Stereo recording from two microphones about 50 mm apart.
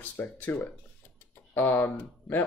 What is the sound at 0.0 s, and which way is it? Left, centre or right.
Speech, left.